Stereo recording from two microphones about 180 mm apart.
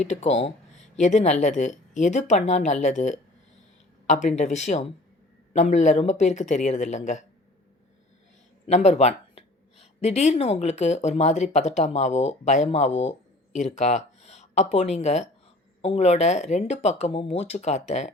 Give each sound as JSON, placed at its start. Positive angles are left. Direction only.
{"t": 0.0, "sound": "speech", "side_deg": 40}
{"t": 8.6, "sound": "speech", "side_deg": 40}